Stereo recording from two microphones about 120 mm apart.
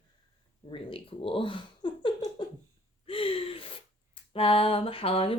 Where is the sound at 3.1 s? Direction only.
50° left (ahead or behind).